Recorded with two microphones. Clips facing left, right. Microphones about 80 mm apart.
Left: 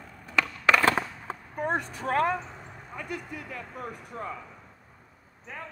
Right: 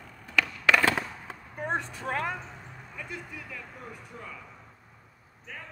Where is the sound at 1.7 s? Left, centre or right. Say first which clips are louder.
Left 2 dB; left.